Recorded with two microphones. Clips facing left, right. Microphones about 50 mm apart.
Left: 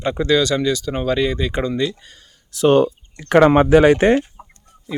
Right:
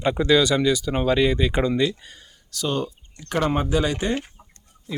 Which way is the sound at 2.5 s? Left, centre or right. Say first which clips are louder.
Left 12 dB; left.